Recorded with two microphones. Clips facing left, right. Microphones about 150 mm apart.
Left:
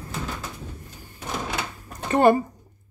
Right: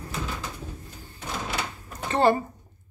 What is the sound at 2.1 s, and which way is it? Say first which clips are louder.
Speech: left 4 dB; 15° left (ahead or behind).